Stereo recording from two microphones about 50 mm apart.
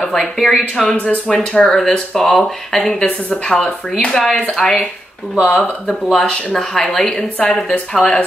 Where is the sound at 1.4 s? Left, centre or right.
Centre.